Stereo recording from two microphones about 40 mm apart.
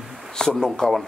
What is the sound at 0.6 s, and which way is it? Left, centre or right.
Speech, centre.